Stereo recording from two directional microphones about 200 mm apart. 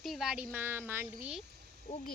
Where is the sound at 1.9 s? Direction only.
45° left (ahead or behind).